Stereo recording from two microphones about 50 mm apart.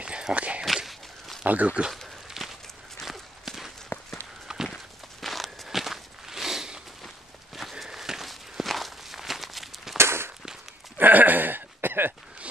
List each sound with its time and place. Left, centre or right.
0.0 s walk: right
0.8 s walk: centre
1.4 s speech: right
2.2 s walk: centre
5.2 s walk: centre
7.8 s walk: centre
9.9 s firecracker: right
11.0 s a sound: right